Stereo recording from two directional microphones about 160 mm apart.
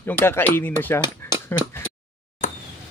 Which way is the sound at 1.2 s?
15° left (ahead or behind).